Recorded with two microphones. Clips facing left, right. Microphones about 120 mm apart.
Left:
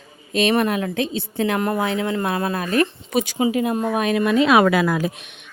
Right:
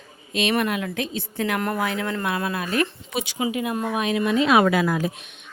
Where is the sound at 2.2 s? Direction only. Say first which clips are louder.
Left 3 dB; 35° left (ahead or behind).